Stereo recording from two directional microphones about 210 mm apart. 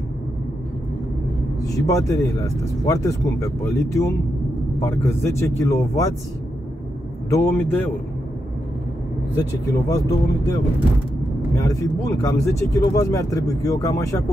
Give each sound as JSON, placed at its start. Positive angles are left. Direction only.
{"t": 1.6, "sound": "speech", "side_deg": 15}
{"t": 7.2, "sound": "speech", "side_deg": 15}
{"t": 9.4, "sound": "speech", "side_deg": 15}